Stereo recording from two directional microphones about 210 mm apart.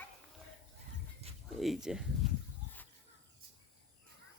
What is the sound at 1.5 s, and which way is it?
Speech, centre (ahead or behind).